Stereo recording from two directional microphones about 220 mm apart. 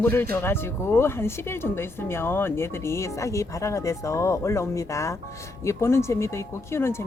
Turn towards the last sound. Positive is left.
turn(degrees=10)  # may be behind; listen again after turning